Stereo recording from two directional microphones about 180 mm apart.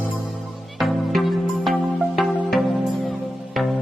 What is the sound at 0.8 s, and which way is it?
Music, centre (ahead or behind).